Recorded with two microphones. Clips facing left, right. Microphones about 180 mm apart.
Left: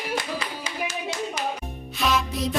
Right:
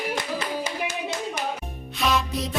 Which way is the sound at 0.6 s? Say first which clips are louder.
Right 1 dB; 50° right (ahead or behind).